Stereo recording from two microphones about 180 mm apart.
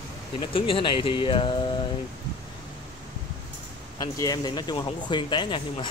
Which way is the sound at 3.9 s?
20° left (ahead or behind).